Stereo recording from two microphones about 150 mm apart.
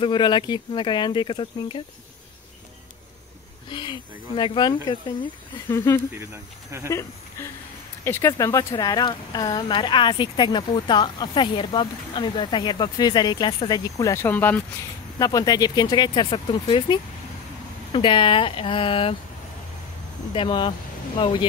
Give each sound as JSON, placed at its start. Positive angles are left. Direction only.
{"t": 0.0, "sound": "speech", "side_deg": 30}
{"t": 3.6, "sound": "speech", "side_deg": 35}
{"t": 5.7, "sound": "speech", "side_deg": 15}
{"t": 6.1, "sound": "speech", "side_deg": -15}
{"t": 8.0, "sound": "speech", "side_deg": 15}
{"t": 15.1, "sound": "speech", "side_deg": 25}
{"t": 20.3, "sound": "speech", "side_deg": 35}